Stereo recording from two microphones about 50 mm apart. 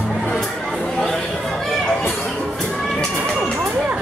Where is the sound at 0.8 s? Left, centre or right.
Centre.